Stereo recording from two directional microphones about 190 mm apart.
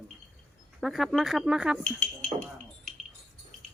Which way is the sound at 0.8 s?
Centre (ahead or behind).